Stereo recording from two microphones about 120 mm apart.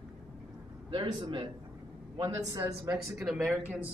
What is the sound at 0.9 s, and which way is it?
A man's voice, 45° right (ahead or behind).